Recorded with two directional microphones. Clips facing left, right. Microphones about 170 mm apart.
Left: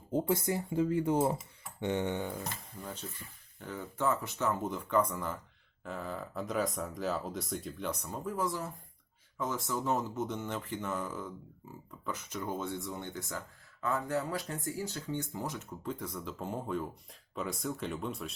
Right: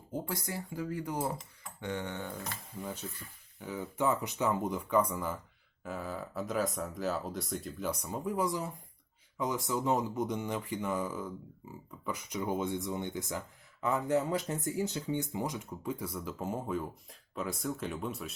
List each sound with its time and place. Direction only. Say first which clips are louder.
0.1 s speech: left 7 dB; 20° left (ahead or behind)
2.8 s speech: right 3 dB; 10° right (ahead or behind)